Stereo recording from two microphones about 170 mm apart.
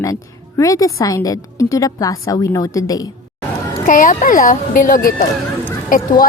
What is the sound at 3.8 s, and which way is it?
Speech, 50° left (ahead or behind).